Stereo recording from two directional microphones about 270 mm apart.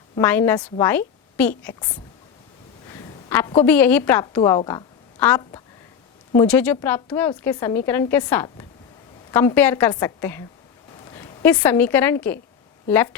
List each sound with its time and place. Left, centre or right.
0.2 s a woman's voice: centre
2.9 s a woman's voice: centre